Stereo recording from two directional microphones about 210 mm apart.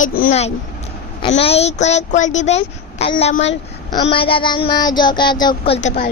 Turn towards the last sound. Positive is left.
turn(degrees=30)  # may be behind; listen again after turning